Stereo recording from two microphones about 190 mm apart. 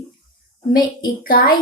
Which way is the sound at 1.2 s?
50° left (ahead or behind).